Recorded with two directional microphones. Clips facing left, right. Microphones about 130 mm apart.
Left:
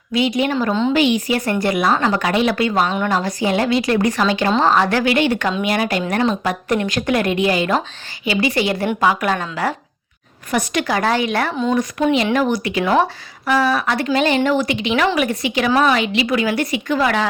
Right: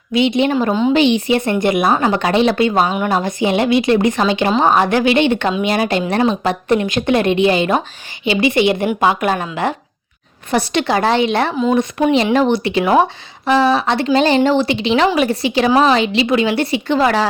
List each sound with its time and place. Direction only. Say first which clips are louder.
0.1 s speech: right 3 dB; 25° right (ahead or behind)